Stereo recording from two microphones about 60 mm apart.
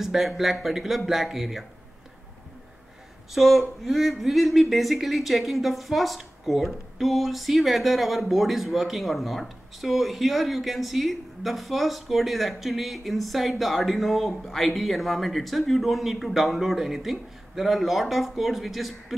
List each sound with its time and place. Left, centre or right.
0.0 s speech: centre
3.3 s speech: centre